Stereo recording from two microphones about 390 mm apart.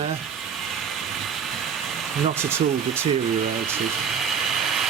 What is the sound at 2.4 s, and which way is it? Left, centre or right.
Speech, centre.